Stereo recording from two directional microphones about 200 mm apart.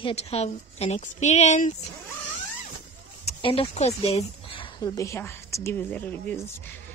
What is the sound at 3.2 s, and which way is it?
Speech, 25° left (ahead or behind).